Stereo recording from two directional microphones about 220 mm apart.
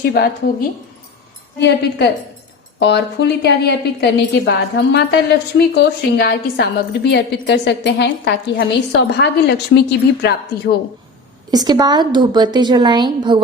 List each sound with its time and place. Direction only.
0.0 s a woman's voice: 45° left (ahead or behind)
1.5 s a woman's voice: 50° left (ahead or behind)
11.5 s a woman's voice: 20° right (ahead or behind)